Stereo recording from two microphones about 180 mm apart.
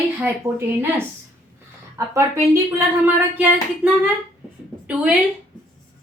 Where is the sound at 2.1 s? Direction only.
15° right (ahead or behind).